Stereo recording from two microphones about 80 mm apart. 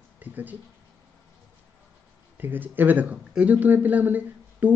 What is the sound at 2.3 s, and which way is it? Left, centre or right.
Speech, right.